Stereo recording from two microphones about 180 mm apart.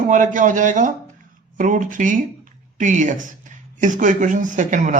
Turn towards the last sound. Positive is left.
turn(degrees=-45)  # may be behind; listen again after turning